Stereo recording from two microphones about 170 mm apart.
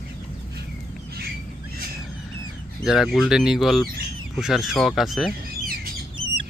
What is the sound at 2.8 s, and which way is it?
Speech, centre (ahead or behind).